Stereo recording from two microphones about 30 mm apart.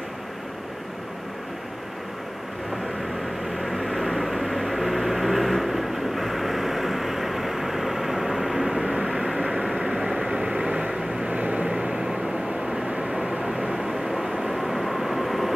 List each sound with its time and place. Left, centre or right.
3.5 s vehicle: centre
10.1 s vehicle: right
11.2 s vehicle: right
11.6 s vehicle: right
13.7 s vehicle: centre
14.1 s vehicle: centre